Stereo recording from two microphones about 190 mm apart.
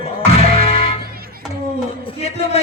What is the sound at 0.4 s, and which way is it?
Music, 30° left (ahead or behind).